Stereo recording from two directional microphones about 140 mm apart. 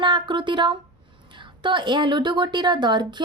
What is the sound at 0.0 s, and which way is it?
A woman's voice, 35° right (ahead or behind).